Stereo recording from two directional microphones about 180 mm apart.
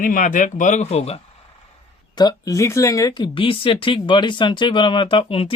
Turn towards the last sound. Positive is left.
turn(degrees=30)  # may be behind; listen again after turning